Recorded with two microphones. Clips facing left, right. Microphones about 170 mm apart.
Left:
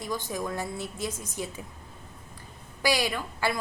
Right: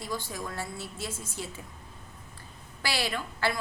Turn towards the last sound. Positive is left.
turn(degrees=15)  # may be behind; listen again after turning